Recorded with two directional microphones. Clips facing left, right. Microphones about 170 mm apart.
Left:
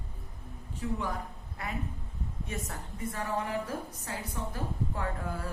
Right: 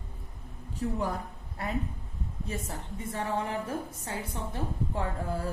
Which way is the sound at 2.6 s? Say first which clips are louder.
Right 1 dB; 25° right (ahead or behind).